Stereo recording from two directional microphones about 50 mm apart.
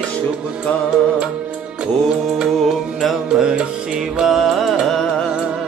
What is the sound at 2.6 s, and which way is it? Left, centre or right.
Music, centre.